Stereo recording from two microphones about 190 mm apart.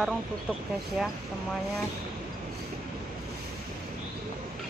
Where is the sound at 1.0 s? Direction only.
Centre (ahead or behind).